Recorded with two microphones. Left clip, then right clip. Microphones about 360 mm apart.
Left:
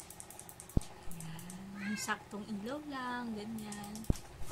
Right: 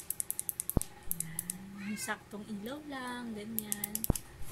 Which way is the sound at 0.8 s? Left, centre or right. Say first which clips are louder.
Right 3 dB; right.